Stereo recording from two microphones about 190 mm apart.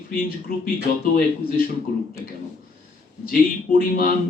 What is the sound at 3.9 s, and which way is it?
Speech, 50° left (ahead or behind).